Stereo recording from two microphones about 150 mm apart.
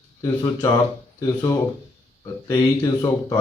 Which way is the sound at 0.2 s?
20° left (ahead or behind).